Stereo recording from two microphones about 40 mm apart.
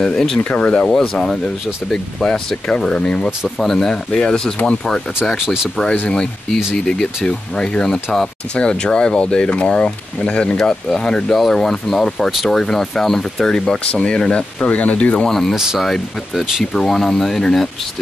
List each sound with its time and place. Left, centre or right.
0.0 s speech: centre
0.4 s speech: left
0.8 s speech: centre
3.0 s speech: left
3.4 s speech: centre; by 5.0 s left
6.0 s speech: centre
8.5 s speech: left
10.6 s speech: centre
13.9 s speech: left
14.7 s speech: left
15.2 s speech: centre
15.5 s speech: centre
15.8 s speech: centre